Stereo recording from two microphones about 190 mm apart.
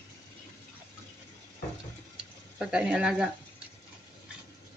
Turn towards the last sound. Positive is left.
turn(degrees=-5)  # may be behind; listen again after turning